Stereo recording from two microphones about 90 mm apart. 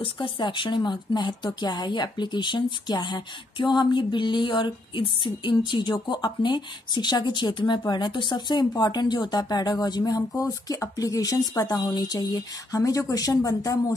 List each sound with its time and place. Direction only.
0.0 s speech: 70° left (ahead or behind); by 13.9 s 40° left (ahead or behind)